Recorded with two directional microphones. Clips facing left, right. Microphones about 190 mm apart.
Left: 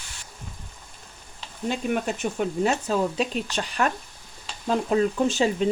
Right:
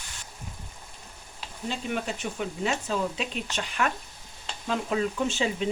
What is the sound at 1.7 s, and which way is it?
Speech, 50° left (ahead or behind).